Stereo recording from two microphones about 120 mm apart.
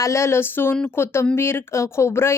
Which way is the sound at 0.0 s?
25° left (ahead or behind).